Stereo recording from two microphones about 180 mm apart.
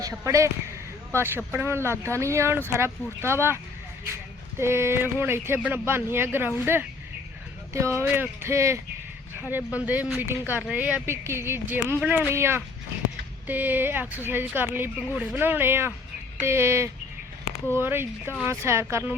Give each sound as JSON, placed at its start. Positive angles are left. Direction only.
{"t": 0.0, "sound": "speech", "side_deg": -15}